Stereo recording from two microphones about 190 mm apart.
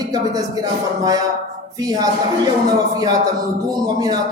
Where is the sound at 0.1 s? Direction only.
20° right (ahead or behind).